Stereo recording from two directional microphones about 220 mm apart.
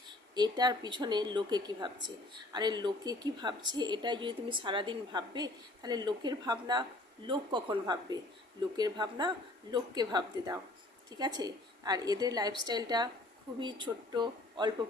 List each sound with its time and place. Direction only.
0.3 s a woman's voice: 20° right (ahead or behind)